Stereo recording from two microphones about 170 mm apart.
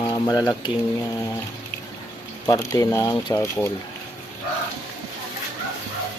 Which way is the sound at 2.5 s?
20° left (ahead or behind).